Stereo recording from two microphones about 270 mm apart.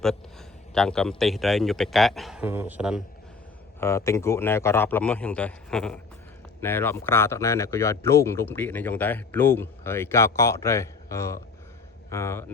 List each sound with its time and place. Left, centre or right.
0.7 s a man's voice: centre
3.8 s speech: centre